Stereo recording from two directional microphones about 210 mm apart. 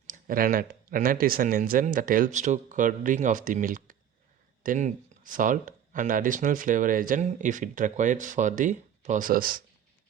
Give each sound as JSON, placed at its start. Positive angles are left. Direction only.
{"t": 0.1, "sound": "speech", "side_deg": -40}